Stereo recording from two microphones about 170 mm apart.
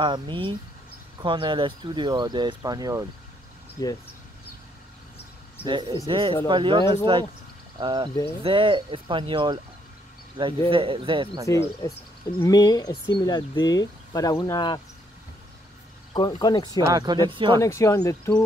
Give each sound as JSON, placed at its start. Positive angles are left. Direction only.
{"t": 0.0, "sound": "speech", "side_deg": -30}
{"t": 3.8, "sound": "speech", "side_deg": 20}
{"t": 5.7, "sound": "speech", "side_deg": -25}
{"t": 10.7, "sound": "a man's voice", "side_deg": -30}
{"t": 11.4, "sound": "speech", "side_deg": 20}
{"t": 16.1, "sound": "speech", "side_deg": 25}
{"t": 16.9, "sound": "speech", "side_deg": -25}
{"t": 17.6, "sound": "speech", "side_deg": 15}